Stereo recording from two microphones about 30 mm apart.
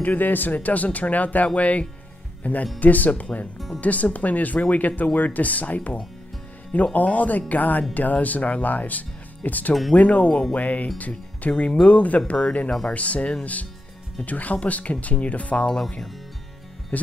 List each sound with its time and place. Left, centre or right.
0.0 s speech: left
3.5 s speech: centre
3.8 s speech: left
9.9 s speech: left
16.9 s speech: left